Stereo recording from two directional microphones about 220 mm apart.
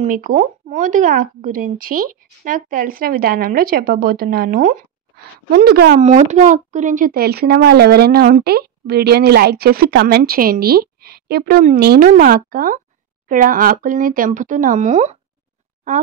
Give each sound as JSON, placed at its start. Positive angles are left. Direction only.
{"t": 0.0, "sound": "speech", "side_deg": -35}
{"t": 5.9, "sound": "speech", "side_deg": -30}